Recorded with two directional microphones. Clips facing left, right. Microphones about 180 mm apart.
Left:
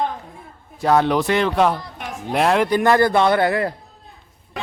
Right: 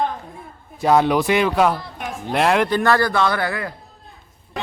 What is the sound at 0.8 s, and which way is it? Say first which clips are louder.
Speech: right 1 dB; 10° right (ahead or behind).